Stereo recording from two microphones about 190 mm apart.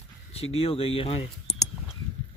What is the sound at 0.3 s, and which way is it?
Speech, 30° left (ahead or behind).